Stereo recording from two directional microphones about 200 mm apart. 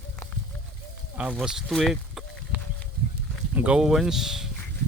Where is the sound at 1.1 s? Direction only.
5° right (ahead or behind).